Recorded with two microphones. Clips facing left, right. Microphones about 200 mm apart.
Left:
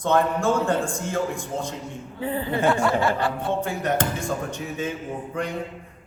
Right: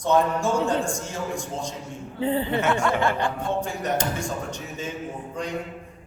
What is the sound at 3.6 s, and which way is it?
A man's voice, 55° left (ahead or behind).